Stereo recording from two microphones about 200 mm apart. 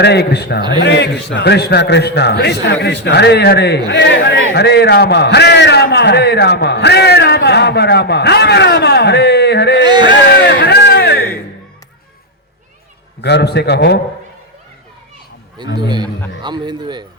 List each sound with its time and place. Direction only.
0.0 s a man's voice: 55° left (ahead or behind)
9.8 s speech: 20° right (ahead or behind)
10.2 s a sound: 55° left (ahead or behind)
13.2 s a man's voice: 55° left (ahead or behind)
16.4 s speech: 20° right (ahead or behind)